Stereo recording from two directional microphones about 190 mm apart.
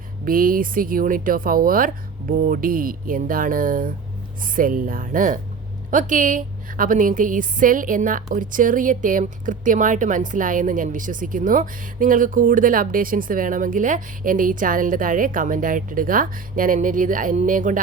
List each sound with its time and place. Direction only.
0.3 s a woman's voice: 50° right (ahead or behind)